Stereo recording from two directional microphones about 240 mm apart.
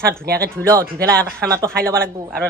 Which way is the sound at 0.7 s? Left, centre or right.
Centre.